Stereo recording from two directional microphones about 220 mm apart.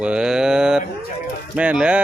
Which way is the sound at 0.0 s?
5° right (ahead or behind).